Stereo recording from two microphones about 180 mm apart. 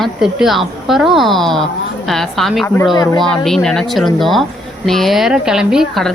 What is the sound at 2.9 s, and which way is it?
Speech, 20° left (ahead or behind).